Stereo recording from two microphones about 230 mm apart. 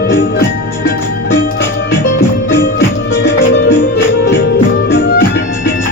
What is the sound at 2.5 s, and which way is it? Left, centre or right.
Music, left.